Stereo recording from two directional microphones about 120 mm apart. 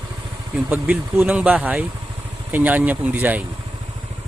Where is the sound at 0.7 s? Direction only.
10° right (ahead or behind).